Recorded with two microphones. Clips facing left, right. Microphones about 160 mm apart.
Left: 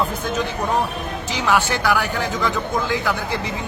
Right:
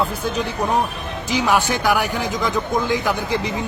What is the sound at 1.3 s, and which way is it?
A man's voice, 15° right (ahead or behind).